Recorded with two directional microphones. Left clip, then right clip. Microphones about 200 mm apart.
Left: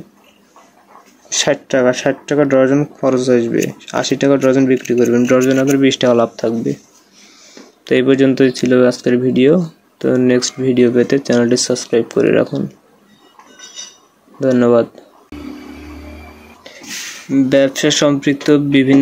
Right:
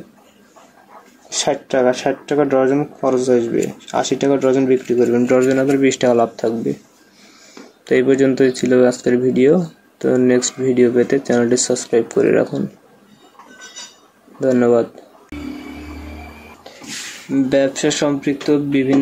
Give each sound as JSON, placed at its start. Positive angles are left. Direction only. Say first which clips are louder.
{"t": 1.3, "sound": "speech", "louder": "left 3 dB", "side_deg": 35}
{"t": 14.4, "sound": "speech", "louder": "left 2 dB", "side_deg": 25}
{"t": 17.3, "sound": "speech", "louder": "left 3 dB", "side_deg": 20}